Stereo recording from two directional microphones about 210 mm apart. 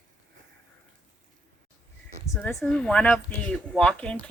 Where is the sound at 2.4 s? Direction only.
5° left (ahead or behind).